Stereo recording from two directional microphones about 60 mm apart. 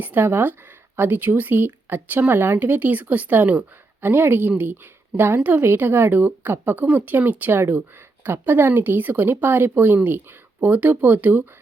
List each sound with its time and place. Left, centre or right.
0.0 s speech: right